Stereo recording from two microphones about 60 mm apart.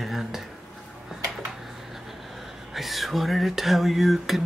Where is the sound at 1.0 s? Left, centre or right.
Centre.